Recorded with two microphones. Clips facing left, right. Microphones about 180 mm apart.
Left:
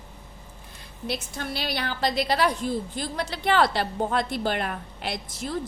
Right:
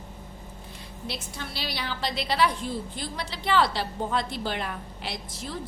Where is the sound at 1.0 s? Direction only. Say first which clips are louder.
Left 6 dB; 50° left (ahead or behind).